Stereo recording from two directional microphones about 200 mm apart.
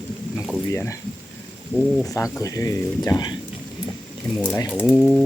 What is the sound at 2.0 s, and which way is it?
Speech, 15° left (ahead or behind).